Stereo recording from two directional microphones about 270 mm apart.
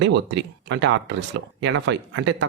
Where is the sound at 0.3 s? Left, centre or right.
Right.